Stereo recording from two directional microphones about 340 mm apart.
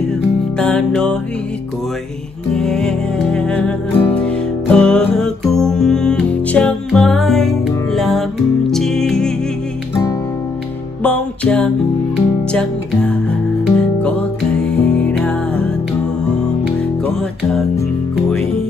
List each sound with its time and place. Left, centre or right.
0.6 s music: centre
2.5 s music: centre
11.0 s music: centre
16.6 s music: centre